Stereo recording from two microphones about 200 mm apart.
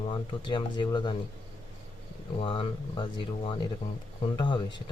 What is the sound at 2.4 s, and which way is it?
Speech, 25° left (ahead or behind).